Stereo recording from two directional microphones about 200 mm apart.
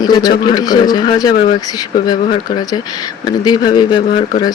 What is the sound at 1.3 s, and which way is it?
Speech, 40° left (ahead or behind).